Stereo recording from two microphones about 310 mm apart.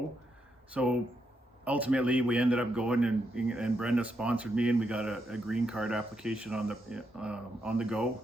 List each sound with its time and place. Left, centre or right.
0.7 s a man's voice: centre